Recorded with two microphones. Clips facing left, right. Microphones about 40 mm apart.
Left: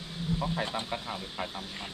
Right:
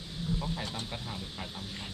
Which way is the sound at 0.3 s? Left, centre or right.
Left.